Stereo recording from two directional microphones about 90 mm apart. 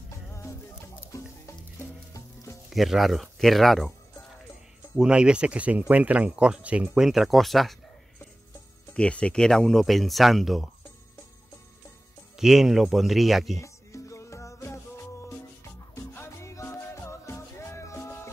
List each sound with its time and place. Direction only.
0.4 s music: 30° left (ahead or behind)
2.7 s speech: centre (ahead or behind)
4.9 s speech: 10° right (ahead or behind)
8.9 s speech: 10° left (ahead or behind)
12.4 s speech: 5° right (ahead or behind)
13.6 s music: 35° left (ahead or behind)
15.9 s music: 30° left (ahead or behind)